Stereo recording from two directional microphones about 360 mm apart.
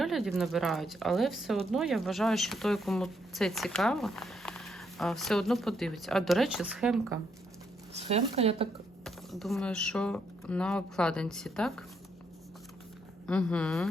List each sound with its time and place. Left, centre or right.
0.0 s speech: centre
7.9 s speech: centre
9.0 s speech: centre
13.2 s speech: centre